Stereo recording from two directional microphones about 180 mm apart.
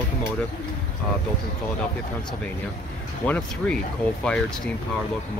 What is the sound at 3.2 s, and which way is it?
Speech, 10° left (ahead or behind).